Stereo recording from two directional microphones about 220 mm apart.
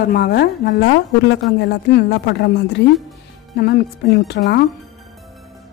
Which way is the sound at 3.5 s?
50° left (ahead or behind).